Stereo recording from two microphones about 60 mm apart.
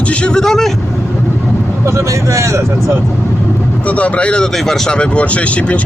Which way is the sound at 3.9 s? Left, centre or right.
Left.